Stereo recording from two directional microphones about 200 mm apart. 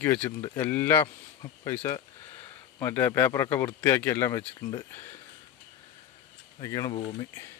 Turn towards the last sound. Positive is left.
turn(degrees=15)  # may be behind; listen again after turning